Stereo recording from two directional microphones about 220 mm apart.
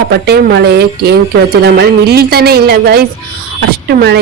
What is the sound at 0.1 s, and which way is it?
Speech, 50° right (ahead or behind).